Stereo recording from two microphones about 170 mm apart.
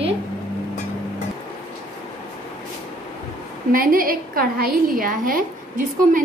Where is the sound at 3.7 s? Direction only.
55° right (ahead or behind).